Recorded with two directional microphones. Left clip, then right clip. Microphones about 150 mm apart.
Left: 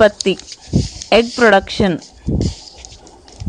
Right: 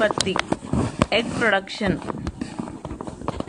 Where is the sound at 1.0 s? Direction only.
50° left (ahead or behind).